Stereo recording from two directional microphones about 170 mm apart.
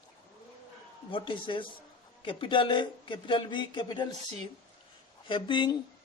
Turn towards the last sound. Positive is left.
turn(degrees=25)  # may be behind; listen again after turning